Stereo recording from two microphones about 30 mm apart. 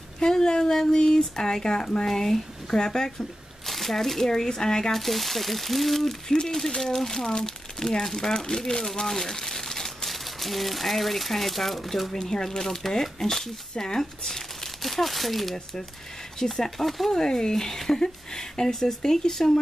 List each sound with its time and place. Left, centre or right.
0.2 s speech: left
2.0 s speech: centre
3.2 s speech: centre
4.3 s speech: left
4.9 s speech: centre
6.4 s speech: centre
9.0 s crumpling: centre
10.0 s speech: centre
12.1 s speech: centre
14.8 s speech: centre
17.1 s speech: left